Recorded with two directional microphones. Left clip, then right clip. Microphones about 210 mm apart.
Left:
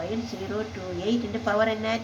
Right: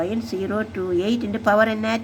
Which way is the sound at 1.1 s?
40° right (ahead or behind).